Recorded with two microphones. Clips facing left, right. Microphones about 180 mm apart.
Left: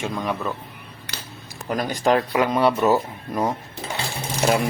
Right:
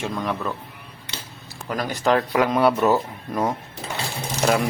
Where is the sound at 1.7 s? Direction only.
20° left (ahead or behind).